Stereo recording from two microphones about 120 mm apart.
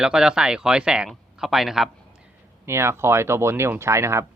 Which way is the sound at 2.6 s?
20° right (ahead or behind).